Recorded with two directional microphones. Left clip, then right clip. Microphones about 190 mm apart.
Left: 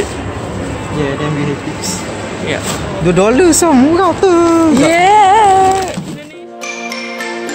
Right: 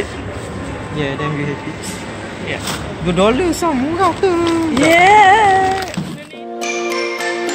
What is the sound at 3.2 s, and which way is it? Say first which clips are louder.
Speech: left 5 dB; 55° left (ahead or behind).